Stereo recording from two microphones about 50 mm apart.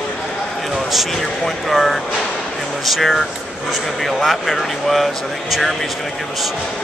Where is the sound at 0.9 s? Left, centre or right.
Centre.